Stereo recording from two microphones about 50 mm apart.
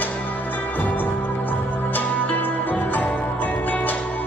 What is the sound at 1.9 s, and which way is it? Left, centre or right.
Music, left.